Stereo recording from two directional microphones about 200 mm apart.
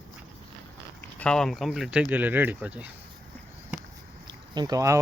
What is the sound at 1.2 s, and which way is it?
Speech, 5° left (ahead or behind).